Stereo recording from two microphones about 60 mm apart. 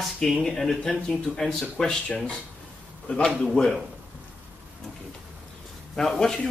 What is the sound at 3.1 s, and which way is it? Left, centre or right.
Speech, centre.